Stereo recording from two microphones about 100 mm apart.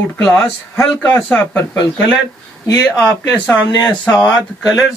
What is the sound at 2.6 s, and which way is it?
Speech, 35° left (ahead or behind).